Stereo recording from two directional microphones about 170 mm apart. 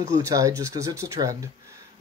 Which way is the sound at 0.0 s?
20° right (ahead or behind).